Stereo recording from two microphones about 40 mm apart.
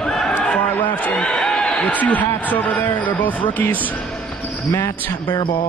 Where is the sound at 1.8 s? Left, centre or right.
Left.